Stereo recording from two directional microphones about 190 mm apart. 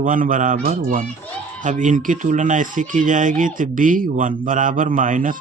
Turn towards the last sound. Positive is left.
turn(degrees=-45)  # may be behind; listen again after turning